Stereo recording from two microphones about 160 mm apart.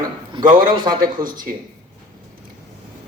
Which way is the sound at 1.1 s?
60° right (ahead or behind).